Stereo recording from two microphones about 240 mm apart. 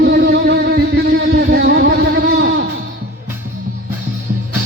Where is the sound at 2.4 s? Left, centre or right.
Right.